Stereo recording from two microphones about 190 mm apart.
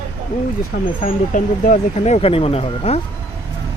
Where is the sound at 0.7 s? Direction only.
50° left (ahead or behind); by 3.0 s 30° left (ahead or behind).